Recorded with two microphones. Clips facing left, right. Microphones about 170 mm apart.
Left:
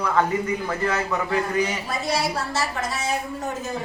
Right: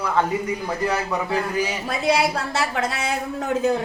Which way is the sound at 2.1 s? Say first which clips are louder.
Right 5 dB; 60° right (ahead or behind).